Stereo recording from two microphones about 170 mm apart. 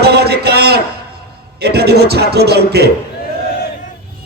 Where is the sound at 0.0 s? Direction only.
70° right (ahead or behind).